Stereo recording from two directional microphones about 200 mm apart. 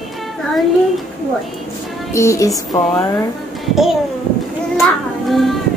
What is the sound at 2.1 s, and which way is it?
Speech, 15° left (ahead or behind).